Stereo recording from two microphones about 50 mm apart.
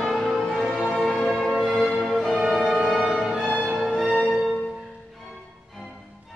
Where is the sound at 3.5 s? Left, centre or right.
Centre.